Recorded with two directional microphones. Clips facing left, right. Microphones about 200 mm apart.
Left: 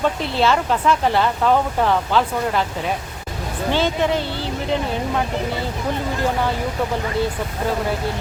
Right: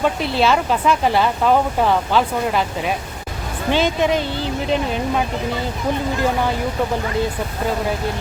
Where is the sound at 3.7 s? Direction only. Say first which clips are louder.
Right 2 dB; 15° right (ahead or behind).